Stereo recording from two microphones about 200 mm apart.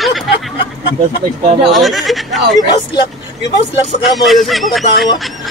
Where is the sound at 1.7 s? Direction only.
Centre (ahead or behind).